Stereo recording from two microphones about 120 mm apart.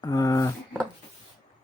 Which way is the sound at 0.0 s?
30° left (ahead or behind).